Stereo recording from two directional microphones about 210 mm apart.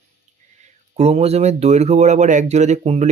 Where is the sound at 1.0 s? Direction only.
30° right (ahead or behind).